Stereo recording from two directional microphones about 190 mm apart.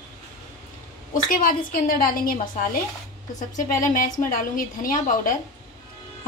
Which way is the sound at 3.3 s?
40° left (ahead or behind).